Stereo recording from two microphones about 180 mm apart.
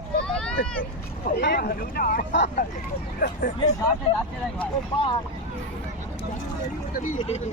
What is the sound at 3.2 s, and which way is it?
Speech, 50° left (ahead or behind).